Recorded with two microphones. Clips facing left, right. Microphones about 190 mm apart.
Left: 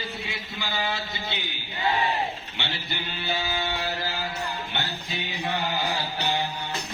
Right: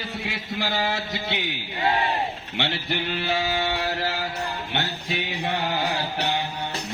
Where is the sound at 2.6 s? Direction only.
85° right.